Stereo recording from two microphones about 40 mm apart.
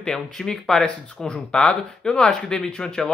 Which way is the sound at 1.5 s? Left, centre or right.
Left.